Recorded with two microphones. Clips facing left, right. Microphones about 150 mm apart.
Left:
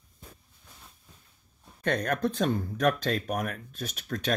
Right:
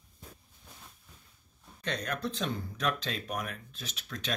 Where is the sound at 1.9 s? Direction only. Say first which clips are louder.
Left 7 dB; 50° left (ahead or behind).